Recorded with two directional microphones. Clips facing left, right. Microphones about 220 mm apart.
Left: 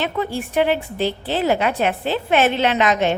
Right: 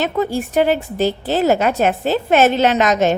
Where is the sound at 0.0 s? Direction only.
40° right (ahead or behind).